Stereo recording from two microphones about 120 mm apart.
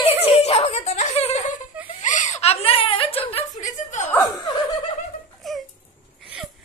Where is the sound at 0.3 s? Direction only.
60° left (ahead or behind).